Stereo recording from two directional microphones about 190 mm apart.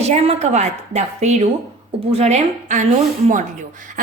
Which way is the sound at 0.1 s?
35° right (ahead or behind).